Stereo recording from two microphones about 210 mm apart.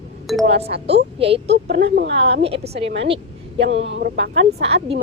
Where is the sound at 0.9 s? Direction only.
30° right (ahead or behind).